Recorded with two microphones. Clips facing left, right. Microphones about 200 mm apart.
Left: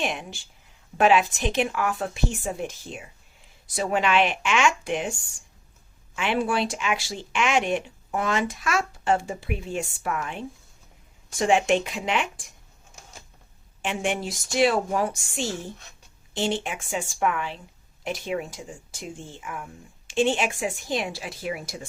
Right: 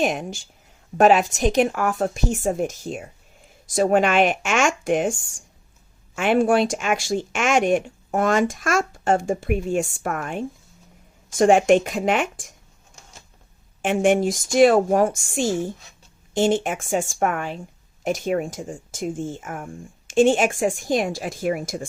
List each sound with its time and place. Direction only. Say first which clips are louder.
0.0 s speech: right 7 dB; 40° right (ahead or behind)
13.8 s speech: right 9 dB; 50° right (ahead or behind)